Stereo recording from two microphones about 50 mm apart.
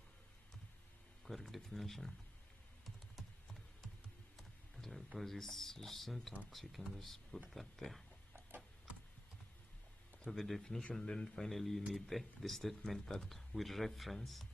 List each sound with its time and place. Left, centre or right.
1.2 s a sound: centre
2.8 s typing: centre
4.4 s a sound: centre
5.2 s speech: centre
8.5 s tick-tock: right
10.3 s speech: centre
10.6 s speech: centre